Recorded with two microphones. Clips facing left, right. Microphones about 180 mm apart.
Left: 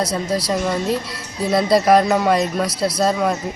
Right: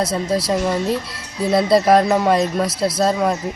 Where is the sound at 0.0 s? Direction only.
25° right (ahead or behind).